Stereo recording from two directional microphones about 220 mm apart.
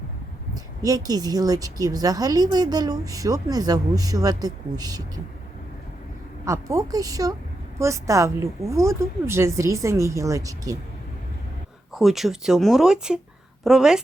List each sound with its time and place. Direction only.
0.5 s a woman's voice: 15° right (ahead or behind)
6.4 s a woman's voice: 15° right (ahead or behind)
11.9 s speech: centre (ahead or behind)